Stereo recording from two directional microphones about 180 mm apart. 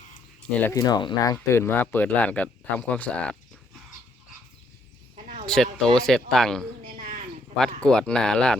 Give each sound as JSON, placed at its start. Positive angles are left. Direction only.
{"t": 0.5, "sound": "speech", "side_deg": 10}
{"t": 0.8, "sound": "speech", "side_deg": 20}
{"t": 5.1, "sound": "a sound", "side_deg": -35}
{"t": 5.5, "sound": "speech", "side_deg": 5}
{"t": 7.8, "sound": "speech", "side_deg": 5}